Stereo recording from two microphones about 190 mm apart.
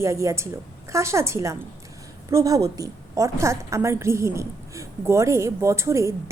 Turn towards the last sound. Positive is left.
turn(degrees=-15)  # may be behind; listen again after turning